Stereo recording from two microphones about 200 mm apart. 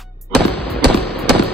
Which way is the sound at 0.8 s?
55° right (ahead or behind).